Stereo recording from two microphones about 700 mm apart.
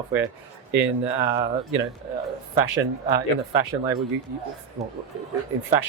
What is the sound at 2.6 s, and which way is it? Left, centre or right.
Speech, right.